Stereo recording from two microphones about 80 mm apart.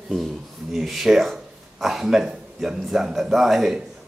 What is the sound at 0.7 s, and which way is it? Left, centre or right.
Speech, centre.